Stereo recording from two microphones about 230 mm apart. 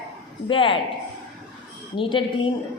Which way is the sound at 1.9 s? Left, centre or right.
Left.